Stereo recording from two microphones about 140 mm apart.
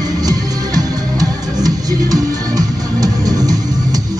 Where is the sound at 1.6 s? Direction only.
25° right (ahead or behind).